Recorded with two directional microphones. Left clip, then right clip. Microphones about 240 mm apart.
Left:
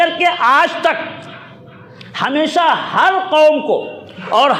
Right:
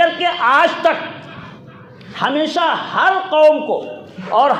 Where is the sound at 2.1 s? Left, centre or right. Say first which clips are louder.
Left 2 dB; left.